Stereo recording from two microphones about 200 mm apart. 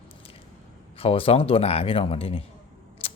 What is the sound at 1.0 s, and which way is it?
Speech, 30° left (ahead or behind).